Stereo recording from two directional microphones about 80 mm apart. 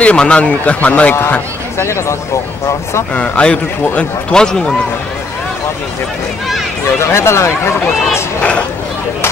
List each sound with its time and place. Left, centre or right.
0.0 s a man's voice: centre
1.8 s speech: left
3.2 s a man's voice: centre
7.0 s speech: left
8.4 s a man's voice: centre